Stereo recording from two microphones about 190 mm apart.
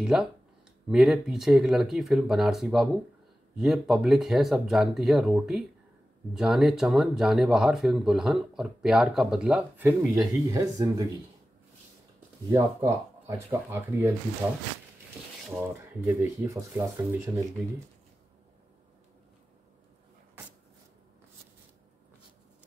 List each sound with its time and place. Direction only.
0.0 s speech: 5° right (ahead or behind); by 11.1 s 20° right (ahead or behind)
12.4 s speech: 15° right (ahead or behind)
16.1 s speech: 15° right (ahead or behind)